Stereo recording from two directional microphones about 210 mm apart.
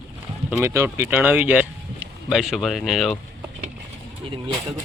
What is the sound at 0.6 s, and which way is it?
Speech, 15° right (ahead or behind).